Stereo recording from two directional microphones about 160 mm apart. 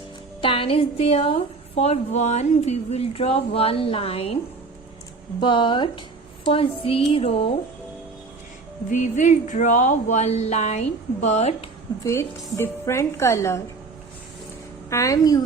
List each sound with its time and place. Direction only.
0.4 s a woman's voice: 35° left (ahead or behind)
5.4 s a woman's voice: 30° left (ahead or behind)
8.9 s speech: 50° left (ahead or behind)
12.0 s a woman's voice: 15° left (ahead or behind)
14.8 s a woman's voice: 20° left (ahead or behind)